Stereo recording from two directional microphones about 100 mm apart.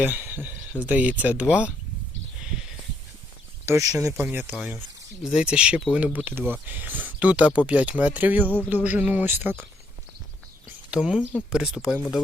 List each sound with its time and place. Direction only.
0.0 s speech: 20° right (ahead or behind)
2.4 s a sound: 5° right (ahead or behind)
3.7 s speech: 30° right (ahead or behind)
4.0 s speech: 20° right (ahead or behind)
8.4 s a sound: 20° left (ahead or behind)
8.7 s speech: 15° right (ahead or behind)
10.9 s speech: 5° right (ahead or behind)